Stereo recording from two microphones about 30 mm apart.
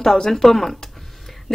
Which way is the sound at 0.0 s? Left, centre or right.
Centre.